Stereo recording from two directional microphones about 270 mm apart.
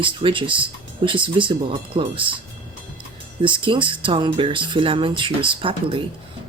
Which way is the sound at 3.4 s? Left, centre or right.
Centre.